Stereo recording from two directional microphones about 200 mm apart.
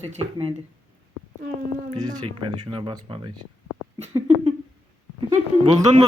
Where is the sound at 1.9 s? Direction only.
20° right (ahead or behind).